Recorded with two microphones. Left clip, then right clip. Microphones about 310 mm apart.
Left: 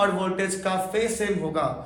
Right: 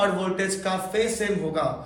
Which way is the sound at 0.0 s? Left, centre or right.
Centre.